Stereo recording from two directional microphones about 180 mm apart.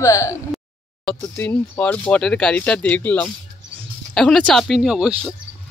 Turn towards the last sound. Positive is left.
turn(degrees=-5)  # may be behind; listen again after turning